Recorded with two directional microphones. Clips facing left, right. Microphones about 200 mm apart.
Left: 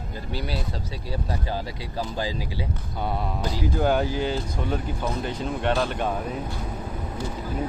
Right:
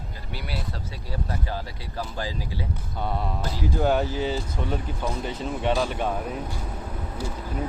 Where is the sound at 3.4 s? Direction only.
Centre (ahead or behind).